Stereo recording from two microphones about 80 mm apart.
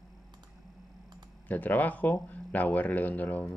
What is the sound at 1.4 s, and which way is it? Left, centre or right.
Speech, left.